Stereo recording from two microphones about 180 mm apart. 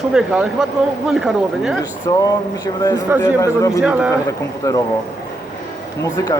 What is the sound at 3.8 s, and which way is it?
Speech, 5° right (ahead or behind).